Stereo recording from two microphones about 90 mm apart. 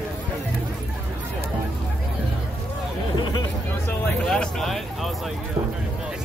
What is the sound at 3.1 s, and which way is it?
Hubbub, 55° left (ahead or behind).